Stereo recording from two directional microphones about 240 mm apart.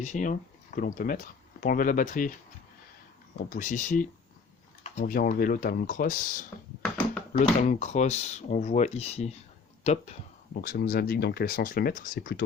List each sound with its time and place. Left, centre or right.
0.0 s speech: left
3.5 s speech: left
6.8 s a sound: centre
7.7 s speech: left
10.5 s speech: left